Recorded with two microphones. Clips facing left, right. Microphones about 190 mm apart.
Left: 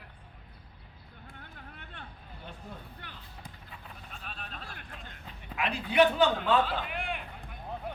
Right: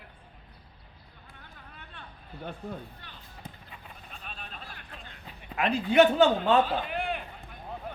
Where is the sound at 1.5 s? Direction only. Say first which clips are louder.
Left 1 dB; 60° left (ahead or behind).